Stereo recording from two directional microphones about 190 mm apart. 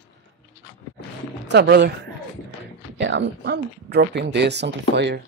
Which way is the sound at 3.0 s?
70° right (ahead or behind).